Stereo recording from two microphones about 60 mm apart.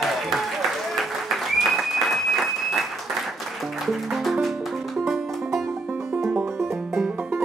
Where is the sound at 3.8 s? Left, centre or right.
Centre.